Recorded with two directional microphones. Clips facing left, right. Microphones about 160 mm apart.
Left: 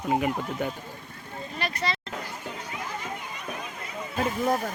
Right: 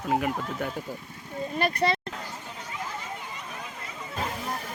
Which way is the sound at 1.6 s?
55° right (ahead or behind).